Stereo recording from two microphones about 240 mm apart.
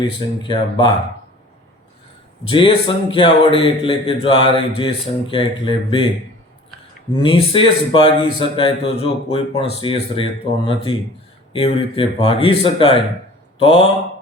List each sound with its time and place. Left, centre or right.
0.1 s a man's voice: left
2.5 s a man's voice: left
7.2 s a man's voice: left